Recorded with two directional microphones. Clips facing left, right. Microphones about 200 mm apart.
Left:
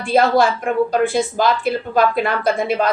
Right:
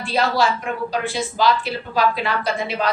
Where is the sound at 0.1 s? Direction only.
50° left (ahead or behind).